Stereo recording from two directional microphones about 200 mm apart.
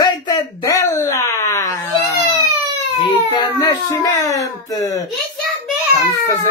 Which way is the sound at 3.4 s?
20° left (ahead or behind).